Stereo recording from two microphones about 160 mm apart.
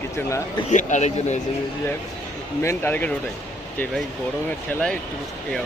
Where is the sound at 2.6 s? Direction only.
10° left (ahead or behind).